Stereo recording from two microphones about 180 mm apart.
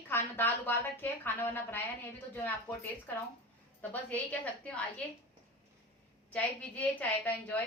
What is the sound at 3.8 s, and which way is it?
A woman's voice, 10° left (ahead or behind).